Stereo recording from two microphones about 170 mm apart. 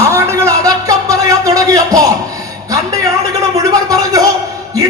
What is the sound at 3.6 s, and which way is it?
Speech, 20° right (ahead or behind).